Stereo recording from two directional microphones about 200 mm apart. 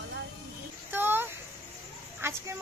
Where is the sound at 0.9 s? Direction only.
10° right (ahead or behind).